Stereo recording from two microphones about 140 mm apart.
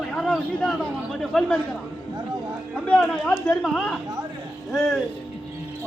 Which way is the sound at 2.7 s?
10° left (ahead or behind).